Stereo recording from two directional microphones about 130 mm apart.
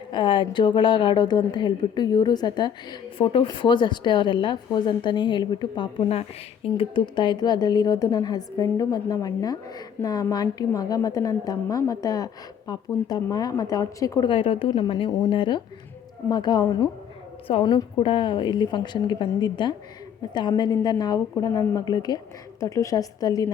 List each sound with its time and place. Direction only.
0.1 s a woman's voice: 40° left (ahead or behind)
6.1 s a woman's voice: 50° left (ahead or behind); by 14.3 s 30° left (ahead or behind)
14.3 s a woman's voice: 45° left (ahead or behind); by 23.5 s 30° left (ahead or behind)